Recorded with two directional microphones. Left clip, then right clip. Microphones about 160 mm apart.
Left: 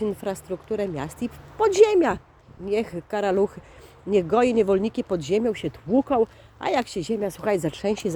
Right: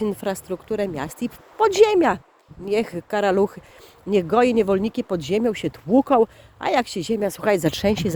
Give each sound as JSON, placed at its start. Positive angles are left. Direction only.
{"t": 0.0, "sound": "speech", "side_deg": -60}
{"t": 5.6, "sound": "speech", "side_deg": -90}
{"t": 6.6, "sound": "speech", "side_deg": -45}
{"t": 7.2, "sound": "speech", "side_deg": -75}